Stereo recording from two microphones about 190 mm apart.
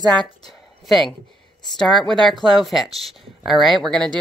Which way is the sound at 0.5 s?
Centre (ahead or behind).